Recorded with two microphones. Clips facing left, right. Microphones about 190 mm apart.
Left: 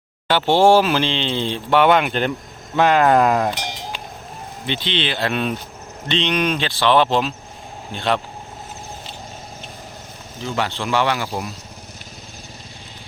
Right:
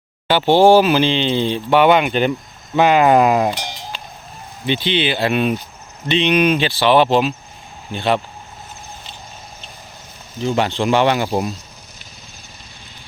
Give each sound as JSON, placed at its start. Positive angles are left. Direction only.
{"t": 0.3, "sound": "speech", "side_deg": 0}
{"t": 3.5, "sound": "a sound", "side_deg": 20}
{"t": 4.6, "sound": "speech", "side_deg": -5}
{"t": 10.4, "sound": "speech", "side_deg": -20}